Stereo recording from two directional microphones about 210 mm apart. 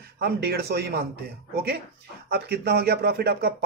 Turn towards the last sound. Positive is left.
turn(degrees=-50)  # may be behind; listen again after turning